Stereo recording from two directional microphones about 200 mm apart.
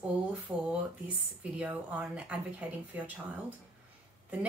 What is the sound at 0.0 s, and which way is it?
Speech, 5° right (ahead or behind).